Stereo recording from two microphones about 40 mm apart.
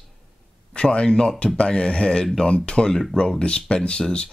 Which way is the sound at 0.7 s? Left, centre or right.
Left.